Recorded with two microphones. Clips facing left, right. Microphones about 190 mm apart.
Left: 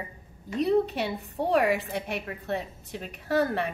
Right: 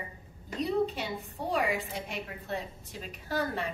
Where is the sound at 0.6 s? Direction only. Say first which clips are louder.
Left 5 dB; 65° left (ahead or behind).